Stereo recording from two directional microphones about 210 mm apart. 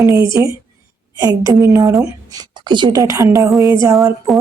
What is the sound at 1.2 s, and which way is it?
A woman's voice, 15° right (ahead or behind).